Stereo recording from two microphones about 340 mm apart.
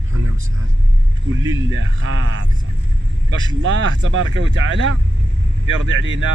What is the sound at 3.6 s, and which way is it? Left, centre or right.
Speech, right.